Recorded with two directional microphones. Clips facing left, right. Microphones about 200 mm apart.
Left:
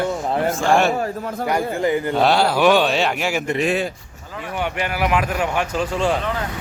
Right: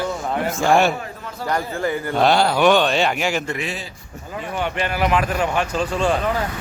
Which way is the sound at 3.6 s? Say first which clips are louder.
Left 9 dB; 55° left (ahead or behind).